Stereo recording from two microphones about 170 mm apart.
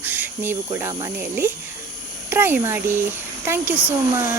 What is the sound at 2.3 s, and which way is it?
Speech, 10° right (ahead or behind).